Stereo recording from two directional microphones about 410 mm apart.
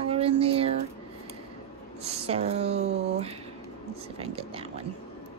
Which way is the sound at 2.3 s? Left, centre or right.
Centre.